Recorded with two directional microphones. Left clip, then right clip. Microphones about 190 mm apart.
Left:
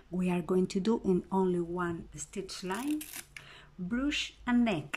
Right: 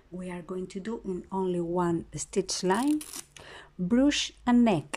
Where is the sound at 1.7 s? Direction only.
25° right (ahead or behind).